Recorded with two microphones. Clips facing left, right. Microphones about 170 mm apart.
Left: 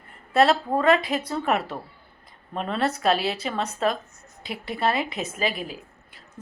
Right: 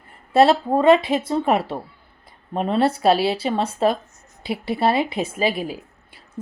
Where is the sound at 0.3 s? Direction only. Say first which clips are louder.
Right 4 dB; 30° right (ahead or behind).